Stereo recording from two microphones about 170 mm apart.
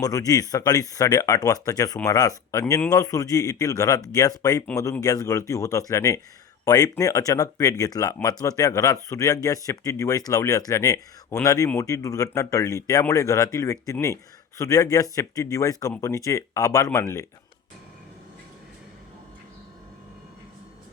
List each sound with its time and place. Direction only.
0.0 s speech: 20° left (ahead or behind)